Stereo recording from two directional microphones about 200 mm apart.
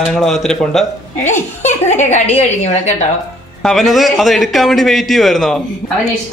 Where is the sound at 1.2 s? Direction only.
35° left (ahead or behind).